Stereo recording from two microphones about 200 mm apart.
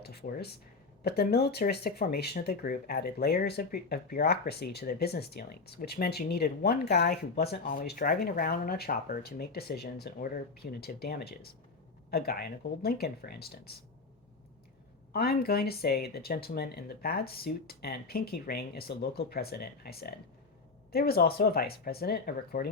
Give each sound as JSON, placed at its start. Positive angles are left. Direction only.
{"t": 0.0, "sound": "a sound", "side_deg": 50}
{"t": 1.0, "sound": "speech", "side_deg": 50}
{"t": 15.1, "sound": "speech", "side_deg": 50}